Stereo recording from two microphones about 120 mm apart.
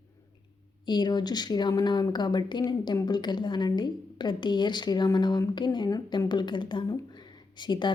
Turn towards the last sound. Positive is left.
turn(degrees=40)  # may be behind; listen again after turning